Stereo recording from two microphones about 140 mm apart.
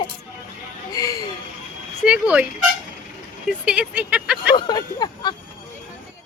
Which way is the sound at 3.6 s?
10° right (ahead or behind).